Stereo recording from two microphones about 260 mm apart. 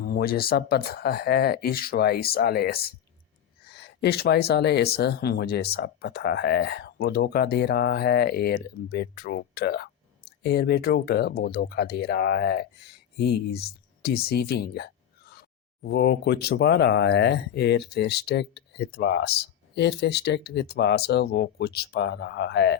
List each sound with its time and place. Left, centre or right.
0.0 s speech: left